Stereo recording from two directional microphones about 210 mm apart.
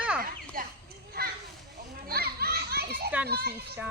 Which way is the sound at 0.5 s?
45° right (ahead or behind).